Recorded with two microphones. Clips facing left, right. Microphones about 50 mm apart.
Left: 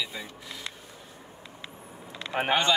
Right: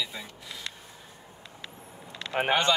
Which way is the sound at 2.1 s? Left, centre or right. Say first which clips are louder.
Left 1 dB; right.